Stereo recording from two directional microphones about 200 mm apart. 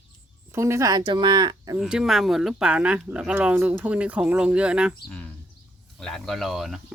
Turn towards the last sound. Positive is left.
turn(degrees=0)  # may be behind; listen again after turning